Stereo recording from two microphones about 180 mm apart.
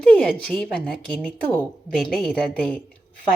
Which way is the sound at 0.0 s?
5° left (ahead or behind).